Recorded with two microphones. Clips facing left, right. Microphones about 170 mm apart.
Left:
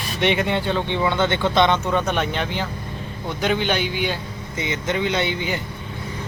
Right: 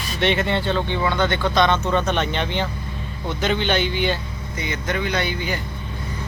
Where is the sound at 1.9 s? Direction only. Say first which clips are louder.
Even; 10° left (ahead or behind).